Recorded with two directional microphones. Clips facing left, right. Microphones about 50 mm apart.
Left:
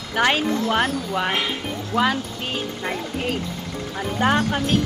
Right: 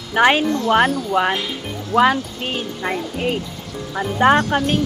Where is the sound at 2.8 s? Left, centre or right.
Centre.